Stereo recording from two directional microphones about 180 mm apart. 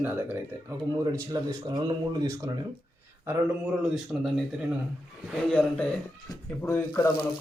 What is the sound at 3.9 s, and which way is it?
Speech, centre (ahead or behind).